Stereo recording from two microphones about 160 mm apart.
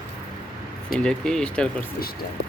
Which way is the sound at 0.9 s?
5° left (ahead or behind).